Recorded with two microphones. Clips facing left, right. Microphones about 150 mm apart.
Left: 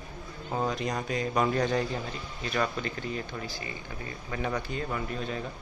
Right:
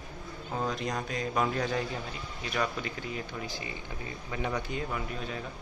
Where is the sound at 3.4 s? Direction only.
20° right (ahead or behind).